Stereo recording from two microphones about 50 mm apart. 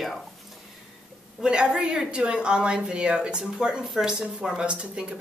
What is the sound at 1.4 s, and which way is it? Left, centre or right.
A woman's voice, centre.